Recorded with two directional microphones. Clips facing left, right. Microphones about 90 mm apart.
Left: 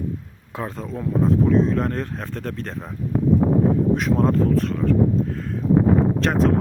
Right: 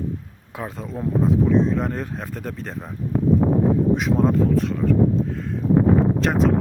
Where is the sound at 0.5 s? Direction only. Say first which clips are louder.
Left 1 dB; 5° right (ahead or behind).